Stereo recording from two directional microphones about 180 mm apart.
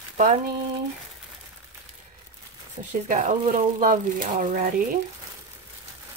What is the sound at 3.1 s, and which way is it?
Speech, 45° right (ahead or behind).